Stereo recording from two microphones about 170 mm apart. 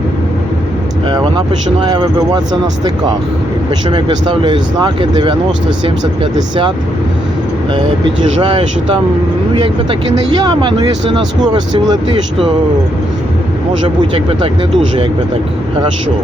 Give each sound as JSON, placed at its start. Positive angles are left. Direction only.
{"t": 1.0, "sound": "speech", "side_deg": -25}
{"t": 6.3, "sound": "speech", "side_deg": -25}
{"t": 8.4, "sound": "speech", "side_deg": -30}
{"t": 13.8, "sound": "speech", "side_deg": -30}